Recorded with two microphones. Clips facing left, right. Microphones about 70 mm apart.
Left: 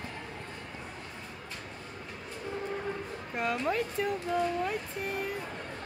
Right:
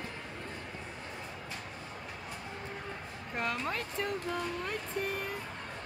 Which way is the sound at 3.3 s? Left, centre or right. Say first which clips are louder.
Left 4 dB; centre.